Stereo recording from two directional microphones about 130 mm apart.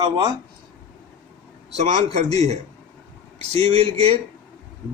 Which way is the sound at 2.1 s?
55° right (ahead or behind).